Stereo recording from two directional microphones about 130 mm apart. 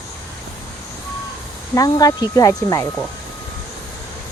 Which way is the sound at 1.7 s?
25° left (ahead or behind).